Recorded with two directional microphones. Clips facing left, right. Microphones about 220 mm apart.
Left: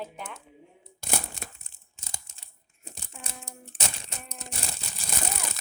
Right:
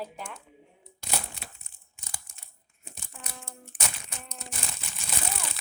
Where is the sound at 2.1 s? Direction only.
25° left (ahead or behind).